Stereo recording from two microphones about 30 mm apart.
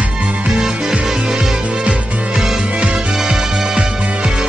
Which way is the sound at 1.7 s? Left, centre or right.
Right.